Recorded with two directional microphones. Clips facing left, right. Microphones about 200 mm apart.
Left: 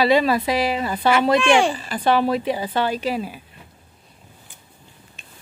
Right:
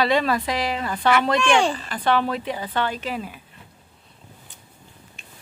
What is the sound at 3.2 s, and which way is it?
Speech, 30° left (ahead or behind).